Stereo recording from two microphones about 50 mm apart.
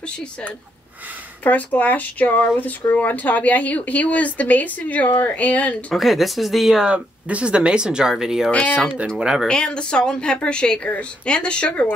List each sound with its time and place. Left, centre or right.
1.4 s speech: left
5.9 s speech: centre
6.9 s speech: right
9.5 s a woman's voice: centre